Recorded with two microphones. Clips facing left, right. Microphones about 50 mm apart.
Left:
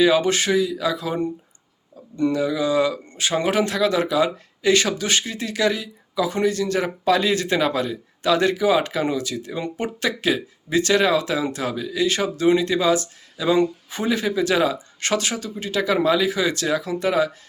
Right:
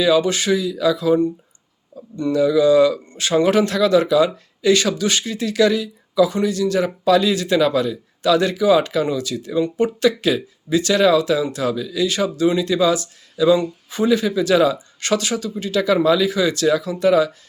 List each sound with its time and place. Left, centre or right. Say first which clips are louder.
0.0 s speech: right 1 dB; left
2.4 s speech: right 10 dB; left
6.3 s speech: right 2 dB; left
12.0 s speech: right 1 dB; left